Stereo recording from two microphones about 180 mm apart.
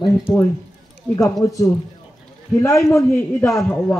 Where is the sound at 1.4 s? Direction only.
20° left (ahead or behind).